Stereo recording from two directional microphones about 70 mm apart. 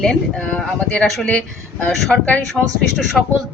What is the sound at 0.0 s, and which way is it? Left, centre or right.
Speech, centre.